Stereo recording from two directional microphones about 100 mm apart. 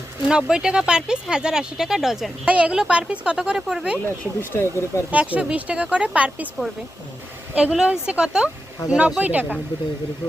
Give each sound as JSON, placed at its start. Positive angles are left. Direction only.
{"t": 0.3, "sound": "speech", "side_deg": -5}
{"t": 3.9, "sound": "speech", "side_deg": 20}
{"t": 5.1, "sound": "speech", "side_deg": -15}
{"t": 7.5, "sound": "speech", "side_deg": -10}